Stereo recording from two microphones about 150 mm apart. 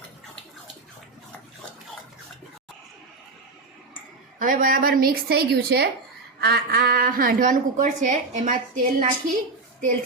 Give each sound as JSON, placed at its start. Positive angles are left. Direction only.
{"t": 4.4, "sound": "a woman's voice", "side_deg": -65}